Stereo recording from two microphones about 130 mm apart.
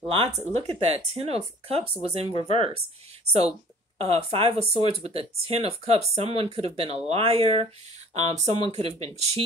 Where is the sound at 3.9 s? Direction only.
50° right (ahead or behind).